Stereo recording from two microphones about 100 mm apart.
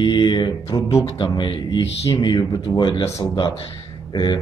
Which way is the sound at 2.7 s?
50° left (ahead or behind).